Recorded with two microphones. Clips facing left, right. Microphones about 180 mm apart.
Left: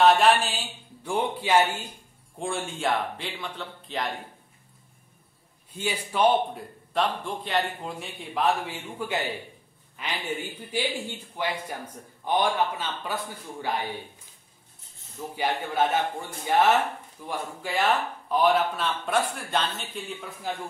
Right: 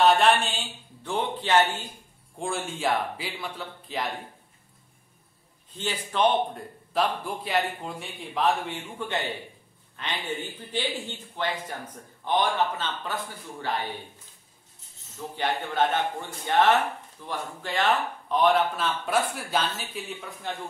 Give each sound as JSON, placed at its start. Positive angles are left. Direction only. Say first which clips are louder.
{"t": 0.0, "sound": "mantra", "louder": "left 1 dB", "side_deg": 0}
{"t": 1.0, "sound": "speech", "louder": "left 2 dB", "side_deg": 10}
{"t": 2.3, "sound": "speech", "louder": "even", "side_deg": 0}
{"t": 5.7, "sound": "speech", "louder": "left 2 dB", "side_deg": 10}
{"t": 6.9, "sound": "speech", "louder": "even", "side_deg": -5}
{"t": 15.3, "sound": "speech", "louder": "even", "side_deg": 10}